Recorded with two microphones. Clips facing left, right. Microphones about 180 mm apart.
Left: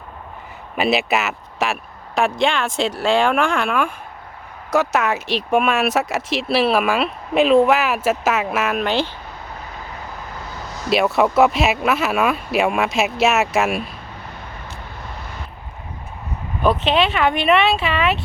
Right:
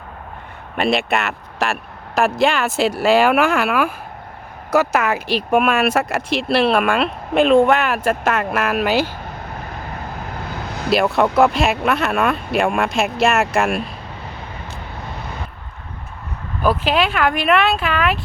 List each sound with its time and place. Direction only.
0.8 s speech: centre (ahead or behind)
10.5 s vehicle: 60° right (ahead or behind)
10.9 s speech: centre (ahead or behind)
16.6 s speech: 5° right (ahead or behind)